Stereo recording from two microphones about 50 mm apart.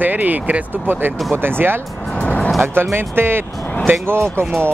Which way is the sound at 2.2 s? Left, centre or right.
Left.